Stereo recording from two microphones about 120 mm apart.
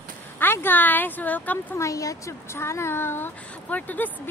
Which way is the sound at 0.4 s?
15° left (ahead or behind).